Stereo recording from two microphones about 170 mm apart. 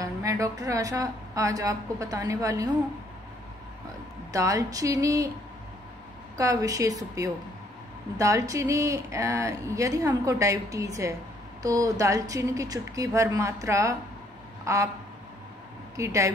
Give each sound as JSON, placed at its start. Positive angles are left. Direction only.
{"t": 0.0, "sound": "speech", "side_deg": -20}
{"t": 4.3, "sound": "speech", "side_deg": -20}
{"t": 6.3, "sound": "speech", "side_deg": -20}
{"t": 16.0, "sound": "speech", "side_deg": -20}